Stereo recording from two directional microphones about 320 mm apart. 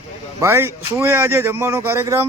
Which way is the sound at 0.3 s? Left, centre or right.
Centre.